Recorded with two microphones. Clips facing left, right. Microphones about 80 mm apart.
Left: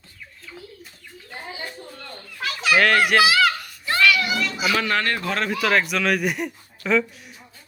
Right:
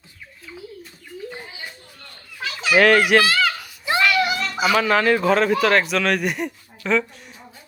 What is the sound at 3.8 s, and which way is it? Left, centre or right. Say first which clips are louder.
Children playing: right 1 dB; centre.